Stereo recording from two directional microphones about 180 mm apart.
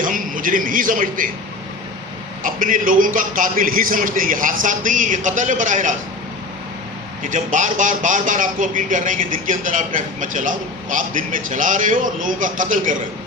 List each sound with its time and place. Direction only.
0.0 s a man's voice: 50° right (ahead or behind)
2.4 s speech: 45° right (ahead or behind)
7.3 s speech: 45° right (ahead or behind)